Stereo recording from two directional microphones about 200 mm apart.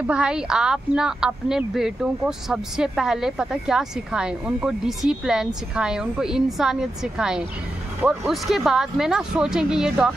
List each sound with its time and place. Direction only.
0.0 s a woman's voice: 5° right (ahead or behind)